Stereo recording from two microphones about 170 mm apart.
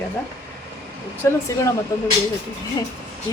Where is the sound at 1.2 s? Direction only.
15° left (ahead or behind).